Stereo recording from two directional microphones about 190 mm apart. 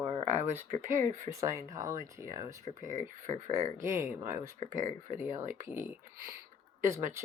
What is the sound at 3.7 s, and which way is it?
Speech, 15° right (ahead or behind).